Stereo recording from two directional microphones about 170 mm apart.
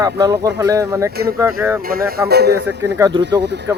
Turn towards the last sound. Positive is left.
turn(degrees=-90)